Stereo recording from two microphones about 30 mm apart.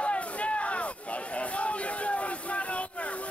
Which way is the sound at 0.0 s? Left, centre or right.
Left.